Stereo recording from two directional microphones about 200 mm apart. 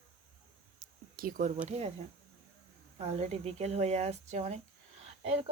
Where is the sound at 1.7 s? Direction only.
30° right (ahead or behind).